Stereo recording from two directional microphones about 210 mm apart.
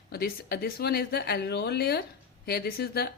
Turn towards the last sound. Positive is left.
turn(degrees=50)  # may be behind; listen again after turning